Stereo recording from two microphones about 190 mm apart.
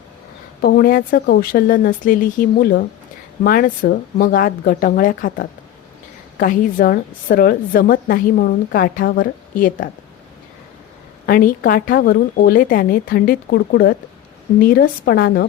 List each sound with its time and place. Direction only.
0.6 s a woman's voice: 50° left (ahead or behind)
11.3 s a woman's voice: 50° left (ahead or behind)